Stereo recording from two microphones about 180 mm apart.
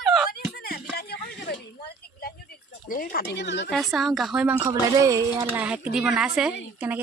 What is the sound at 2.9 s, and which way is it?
Speech, 50° left (ahead or behind).